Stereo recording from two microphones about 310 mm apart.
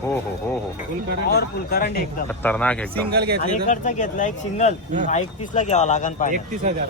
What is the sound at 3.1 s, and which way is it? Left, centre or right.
Speech, right.